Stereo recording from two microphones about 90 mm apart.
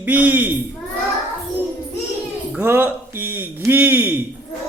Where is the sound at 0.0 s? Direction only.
20° right (ahead or behind).